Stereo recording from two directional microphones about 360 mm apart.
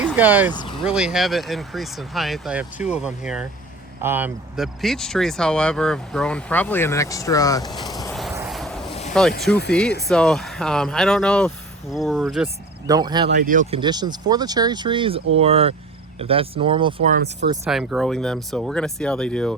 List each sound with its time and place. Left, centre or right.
0.0 s speech: centre
0.5 s speech: centre
0.9 s speech: centre
8.1 s vehicle: centre
9.5 s speech: centre
12.9 s speech: centre
17.5 s speech: centre